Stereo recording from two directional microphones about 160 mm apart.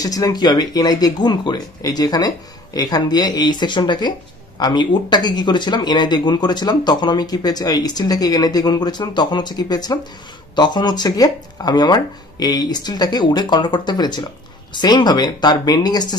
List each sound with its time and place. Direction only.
0.0 s speech: 20° left (ahead or behind)